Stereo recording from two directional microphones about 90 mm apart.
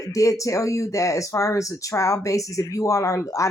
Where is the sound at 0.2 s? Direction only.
35° left (ahead or behind).